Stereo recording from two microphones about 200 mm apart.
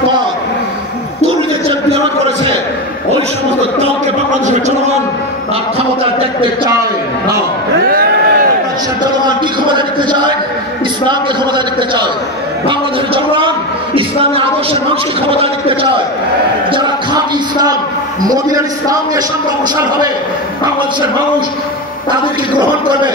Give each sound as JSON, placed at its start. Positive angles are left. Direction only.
{"t": 7.9, "sound": "a sound", "side_deg": -45}
{"t": 9.7, "sound": "a man's voice", "side_deg": -20}
{"t": 16.7, "sound": "a man's voice", "side_deg": -20}